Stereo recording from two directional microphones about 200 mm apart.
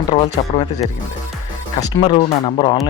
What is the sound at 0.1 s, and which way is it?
Speech, 30° left (ahead or behind).